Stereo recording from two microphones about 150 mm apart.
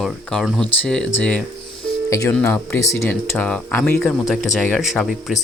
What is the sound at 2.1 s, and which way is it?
Speech, 20° left (ahead or behind).